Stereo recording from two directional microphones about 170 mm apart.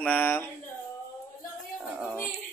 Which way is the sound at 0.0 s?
10° left (ahead or behind).